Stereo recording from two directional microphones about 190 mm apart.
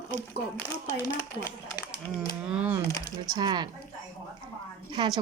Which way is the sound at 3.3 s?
20° right (ahead or behind).